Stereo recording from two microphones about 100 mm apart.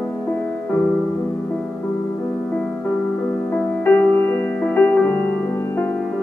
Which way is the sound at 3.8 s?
20° left (ahead or behind).